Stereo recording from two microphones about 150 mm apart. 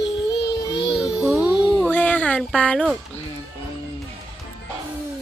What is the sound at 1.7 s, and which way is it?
Music, 10° left (ahead or behind).